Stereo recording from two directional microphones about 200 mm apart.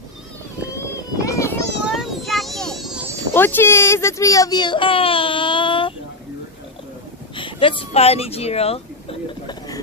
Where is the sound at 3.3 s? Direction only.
10° left (ahead or behind).